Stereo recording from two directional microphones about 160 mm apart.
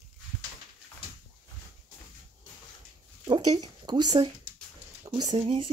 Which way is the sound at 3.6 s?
25° right (ahead or behind).